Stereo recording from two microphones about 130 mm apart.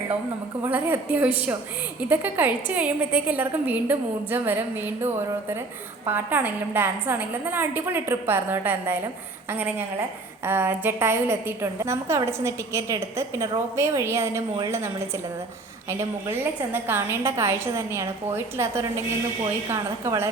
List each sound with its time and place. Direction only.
0.6 s a woman's voice: 15° right (ahead or behind)